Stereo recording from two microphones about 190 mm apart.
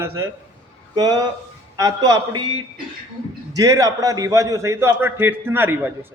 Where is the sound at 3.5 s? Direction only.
15° right (ahead or behind).